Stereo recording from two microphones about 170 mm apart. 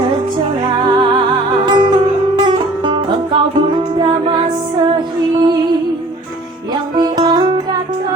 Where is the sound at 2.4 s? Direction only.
25° right (ahead or behind).